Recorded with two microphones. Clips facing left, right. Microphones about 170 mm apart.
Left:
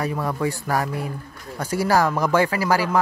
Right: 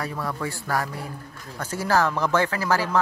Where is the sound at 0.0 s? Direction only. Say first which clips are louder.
Left 5 dB; 15° left (ahead or behind).